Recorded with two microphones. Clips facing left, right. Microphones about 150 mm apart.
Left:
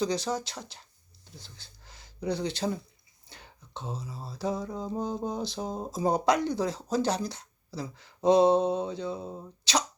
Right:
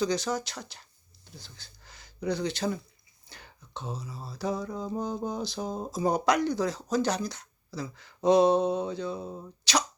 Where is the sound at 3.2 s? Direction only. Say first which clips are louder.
Even; 30° left (ahead or behind).